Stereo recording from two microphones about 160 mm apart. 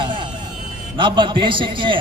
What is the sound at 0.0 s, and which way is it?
Vehicle, 30° right (ahead or behind).